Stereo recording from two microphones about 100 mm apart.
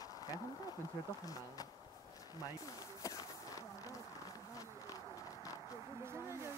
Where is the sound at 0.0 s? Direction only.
40° left (ahead or behind).